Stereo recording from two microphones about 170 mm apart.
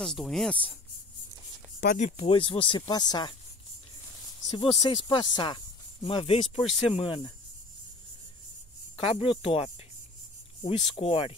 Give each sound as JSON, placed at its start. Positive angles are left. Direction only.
{"t": 0.0, "sound": "speech", "side_deg": 0}
{"t": 1.8, "sound": "speech", "side_deg": 50}
{"t": 2.1, "sound": "speech", "side_deg": 30}
{"t": 4.6, "sound": "speech", "side_deg": 25}
{"t": 8.9, "sound": "speech", "side_deg": 30}